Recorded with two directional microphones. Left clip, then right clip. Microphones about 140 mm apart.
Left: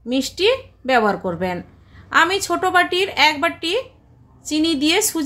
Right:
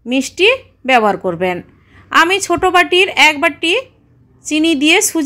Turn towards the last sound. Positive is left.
turn(degrees=-30)  # may be behind; listen again after turning